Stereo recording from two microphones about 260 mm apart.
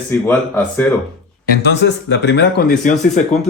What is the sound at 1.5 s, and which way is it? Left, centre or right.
Speech, left.